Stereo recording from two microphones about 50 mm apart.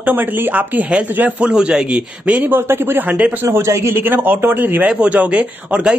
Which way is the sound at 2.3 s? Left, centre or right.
Right.